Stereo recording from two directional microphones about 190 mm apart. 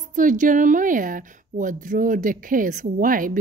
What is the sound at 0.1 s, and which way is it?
A woman's voice, 40° right (ahead or behind).